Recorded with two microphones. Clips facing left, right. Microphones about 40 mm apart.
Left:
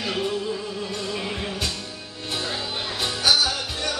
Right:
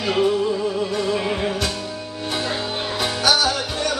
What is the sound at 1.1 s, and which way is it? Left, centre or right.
Music, centre.